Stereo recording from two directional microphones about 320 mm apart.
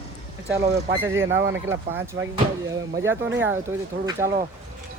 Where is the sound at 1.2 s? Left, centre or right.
Right.